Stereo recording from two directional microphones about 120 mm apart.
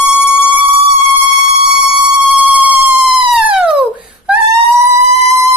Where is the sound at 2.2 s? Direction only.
15° right (ahead or behind).